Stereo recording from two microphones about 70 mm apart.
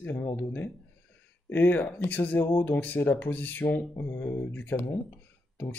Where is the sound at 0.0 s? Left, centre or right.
Left.